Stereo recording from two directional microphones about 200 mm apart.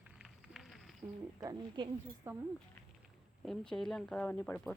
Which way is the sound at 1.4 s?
20° right (ahead or behind).